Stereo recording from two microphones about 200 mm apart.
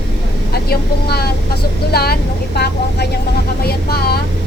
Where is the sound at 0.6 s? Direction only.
50° left (ahead or behind).